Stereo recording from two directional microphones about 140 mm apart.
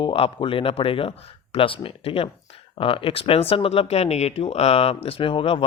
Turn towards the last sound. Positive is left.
turn(degrees=40)  # may be behind; listen again after turning